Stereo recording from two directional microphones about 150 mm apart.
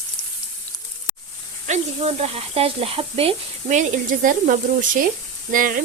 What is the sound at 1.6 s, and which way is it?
Speech, 45° right (ahead or behind).